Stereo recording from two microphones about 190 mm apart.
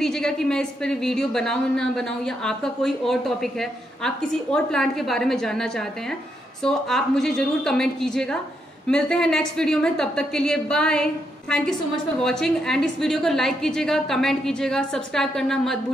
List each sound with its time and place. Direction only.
0.0 s speech: 5° left (ahead or behind)